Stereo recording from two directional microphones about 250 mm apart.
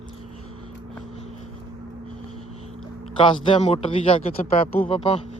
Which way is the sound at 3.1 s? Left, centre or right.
Centre.